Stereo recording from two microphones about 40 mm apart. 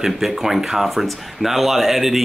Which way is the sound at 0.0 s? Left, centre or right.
Centre.